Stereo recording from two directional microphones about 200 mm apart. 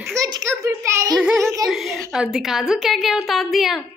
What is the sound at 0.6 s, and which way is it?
Child singing, 15° right (ahead or behind).